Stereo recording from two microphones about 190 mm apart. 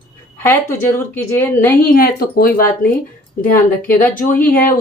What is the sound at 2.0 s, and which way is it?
Speech, 50° left (ahead or behind).